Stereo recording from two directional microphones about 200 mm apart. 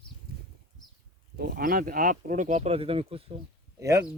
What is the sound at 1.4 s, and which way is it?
Speech, 45° right (ahead or behind).